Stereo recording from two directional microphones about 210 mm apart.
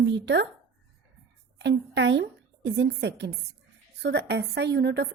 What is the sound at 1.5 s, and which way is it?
A woman's voice, 55° right (ahead or behind).